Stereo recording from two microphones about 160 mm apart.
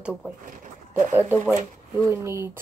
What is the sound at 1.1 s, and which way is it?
Speech, 10° right (ahead or behind).